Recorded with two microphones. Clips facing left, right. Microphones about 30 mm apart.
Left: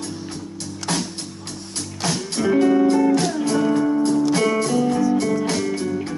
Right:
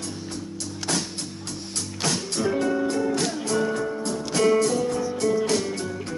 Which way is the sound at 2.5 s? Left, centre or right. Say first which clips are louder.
Left 10 dB; centre.